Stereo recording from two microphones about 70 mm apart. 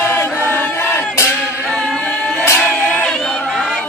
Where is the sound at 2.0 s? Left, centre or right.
Centre.